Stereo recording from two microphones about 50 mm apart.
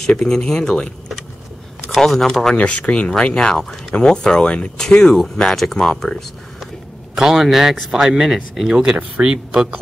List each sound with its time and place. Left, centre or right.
0.0 s speech: centre
1.9 s speech: centre
2.5 s speech: left; by 6.7 s centre
7.2 s speech: centre